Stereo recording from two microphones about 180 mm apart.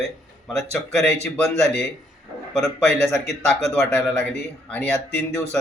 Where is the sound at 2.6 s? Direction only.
5° left (ahead or behind).